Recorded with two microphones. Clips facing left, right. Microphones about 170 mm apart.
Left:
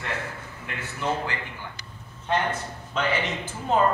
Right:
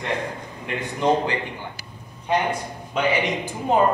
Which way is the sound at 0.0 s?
15° right (ahead or behind).